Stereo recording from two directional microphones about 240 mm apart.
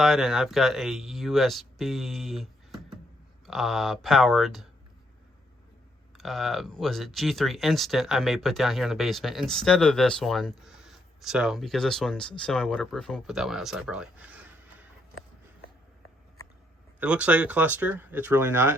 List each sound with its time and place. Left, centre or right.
0.0 s speech: centre
6.1 s speech: centre
17.0 s speech: centre